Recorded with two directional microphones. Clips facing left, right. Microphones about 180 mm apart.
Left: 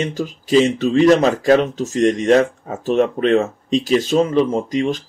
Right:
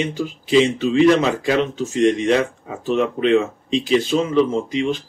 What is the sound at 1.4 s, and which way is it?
Speech, 40° left (ahead or behind).